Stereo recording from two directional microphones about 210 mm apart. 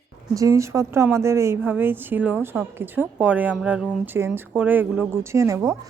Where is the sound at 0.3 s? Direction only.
15° right (ahead or behind).